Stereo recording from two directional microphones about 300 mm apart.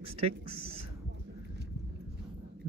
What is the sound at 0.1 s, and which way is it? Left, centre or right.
Speech, centre.